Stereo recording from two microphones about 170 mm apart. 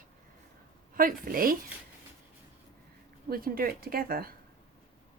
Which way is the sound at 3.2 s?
60° right (ahead or behind).